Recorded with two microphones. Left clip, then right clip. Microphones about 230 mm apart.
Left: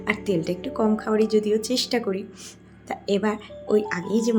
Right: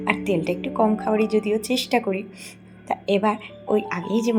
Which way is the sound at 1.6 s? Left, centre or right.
Left.